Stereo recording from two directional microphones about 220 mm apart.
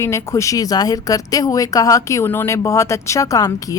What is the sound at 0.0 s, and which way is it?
A woman's voice, 15° left (ahead or behind).